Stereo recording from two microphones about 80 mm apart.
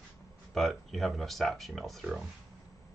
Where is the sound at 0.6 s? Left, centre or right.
Centre.